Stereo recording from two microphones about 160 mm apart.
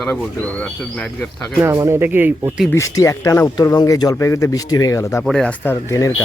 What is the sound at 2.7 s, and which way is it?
Speech, 20° left (ahead or behind).